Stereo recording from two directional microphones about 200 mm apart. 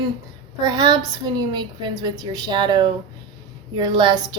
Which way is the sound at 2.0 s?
20° right (ahead or behind).